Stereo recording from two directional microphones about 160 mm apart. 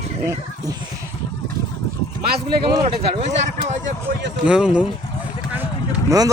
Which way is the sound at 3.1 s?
45° right (ahead or behind).